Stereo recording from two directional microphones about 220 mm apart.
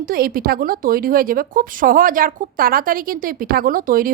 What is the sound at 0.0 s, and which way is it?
A woman's voice, 40° right (ahead or behind).